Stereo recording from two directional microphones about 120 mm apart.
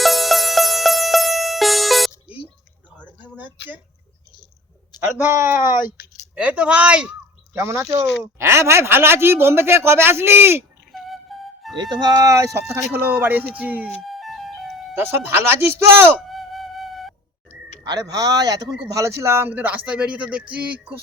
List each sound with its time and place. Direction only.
0.0 s music: centre (ahead or behind)
3.3 s a sound: 15° right (ahead or behind)
4.9 s speech: 20° right (ahead or behind)
7.5 s speech: 25° right (ahead or behind)
10.9 s flute: centre (ahead or behind)
11.8 s speech: 35° right (ahead or behind)
12.7 s speech: 15° right (ahead or behind)
14.0 s music: centre (ahead or behind)
14.9 s speech: 20° right (ahead or behind)
16.3 s flute: centre (ahead or behind)
17.8 s speech: 30° right (ahead or behind); by 21.0 s 10° right (ahead or behind)